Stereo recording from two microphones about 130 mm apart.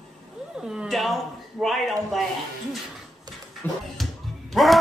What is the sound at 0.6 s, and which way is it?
A man's voice, 5° right (ahead or behind).